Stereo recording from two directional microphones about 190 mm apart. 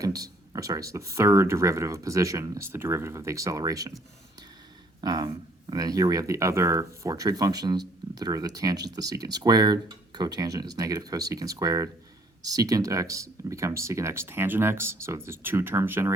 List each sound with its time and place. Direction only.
0.0 s speech: 20° right (ahead or behind)
4.9 s speech: 20° right (ahead or behind)